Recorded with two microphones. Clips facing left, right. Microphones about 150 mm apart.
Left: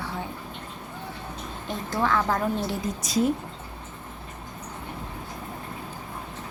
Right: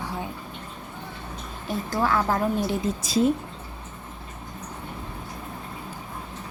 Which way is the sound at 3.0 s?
25° right (ahead or behind).